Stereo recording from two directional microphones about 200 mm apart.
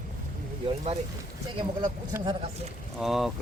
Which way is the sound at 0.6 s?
30° right (ahead or behind).